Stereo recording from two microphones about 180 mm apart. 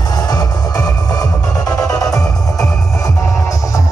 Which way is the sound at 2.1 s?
5° left (ahead or behind).